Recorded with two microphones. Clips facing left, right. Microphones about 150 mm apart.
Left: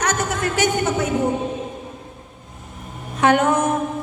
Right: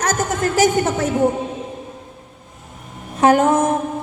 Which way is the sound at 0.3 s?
40° right (ahead or behind).